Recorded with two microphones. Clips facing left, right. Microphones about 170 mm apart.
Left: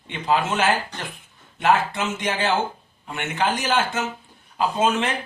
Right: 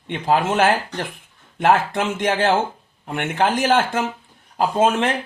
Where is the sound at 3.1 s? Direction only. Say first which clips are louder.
Right 4 dB; 55° right (ahead or behind).